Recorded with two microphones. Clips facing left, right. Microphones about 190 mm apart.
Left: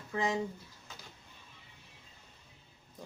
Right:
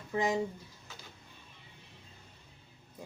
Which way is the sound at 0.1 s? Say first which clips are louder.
Right 2 dB; 15° right (ahead or behind).